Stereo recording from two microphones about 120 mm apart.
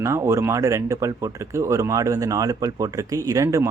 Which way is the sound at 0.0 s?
25° right (ahead or behind).